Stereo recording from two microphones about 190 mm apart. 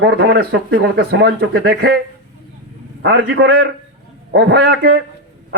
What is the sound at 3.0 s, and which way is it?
Speech, 55° right (ahead or behind).